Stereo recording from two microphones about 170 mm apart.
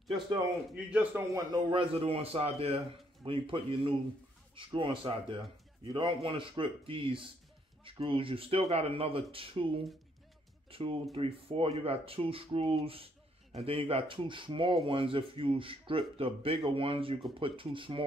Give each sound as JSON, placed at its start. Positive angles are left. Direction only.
{"t": 0.7, "sound": "a man's voice", "side_deg": -5}
{"t": 1.3, "sound": "speech", "side_deg": -30}
{"t": 10.7, "sound": "speech", "side_deg": -35}